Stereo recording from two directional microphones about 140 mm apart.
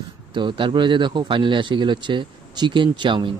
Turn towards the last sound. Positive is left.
turn(degrees=-35)  # may be behind; listen again after turning